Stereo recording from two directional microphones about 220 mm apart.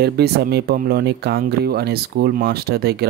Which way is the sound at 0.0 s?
45° right (ahead or behind).